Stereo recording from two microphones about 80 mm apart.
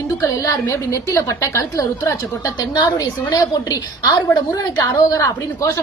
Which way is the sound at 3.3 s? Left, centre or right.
Left.